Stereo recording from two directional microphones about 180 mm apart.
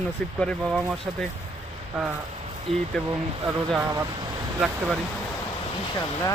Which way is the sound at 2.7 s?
Centre (ahead or behind).